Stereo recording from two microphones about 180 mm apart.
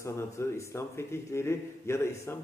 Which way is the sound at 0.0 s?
15° left (ahead or behind).